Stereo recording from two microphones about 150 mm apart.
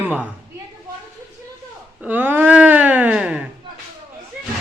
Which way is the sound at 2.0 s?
10° right (ahead or behind).